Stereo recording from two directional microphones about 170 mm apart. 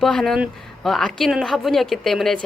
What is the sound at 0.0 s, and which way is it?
Speech, centre (ahead or behind).